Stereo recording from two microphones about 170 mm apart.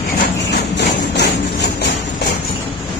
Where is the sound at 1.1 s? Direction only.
75° left (ahead or behind).